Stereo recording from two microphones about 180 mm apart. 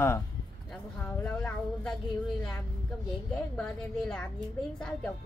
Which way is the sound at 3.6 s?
5° left (ahead or behind).